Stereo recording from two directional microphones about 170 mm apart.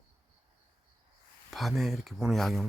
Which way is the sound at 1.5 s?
Centre (ahead or behind).